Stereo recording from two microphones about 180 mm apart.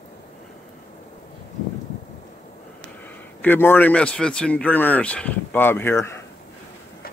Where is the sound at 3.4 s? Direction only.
10° left (ahead or behind).